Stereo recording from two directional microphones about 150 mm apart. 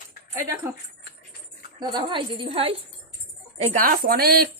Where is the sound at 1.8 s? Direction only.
30° right (ahead or behind).